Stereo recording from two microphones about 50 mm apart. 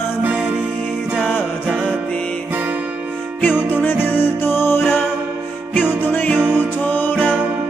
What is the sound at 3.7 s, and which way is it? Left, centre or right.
Music, left.